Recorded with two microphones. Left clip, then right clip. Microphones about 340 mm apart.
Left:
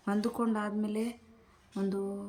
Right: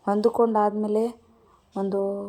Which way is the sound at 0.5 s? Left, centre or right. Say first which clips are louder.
Right 13 dB; centre.